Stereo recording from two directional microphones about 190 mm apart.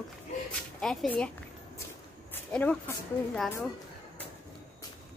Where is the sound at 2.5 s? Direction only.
5° left (ahead or behind).